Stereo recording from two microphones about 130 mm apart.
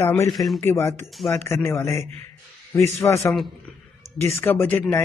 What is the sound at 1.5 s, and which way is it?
Speech, 20° left (ahead or behind).